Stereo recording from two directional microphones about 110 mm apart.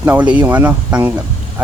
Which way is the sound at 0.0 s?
15° right (ahead or behind).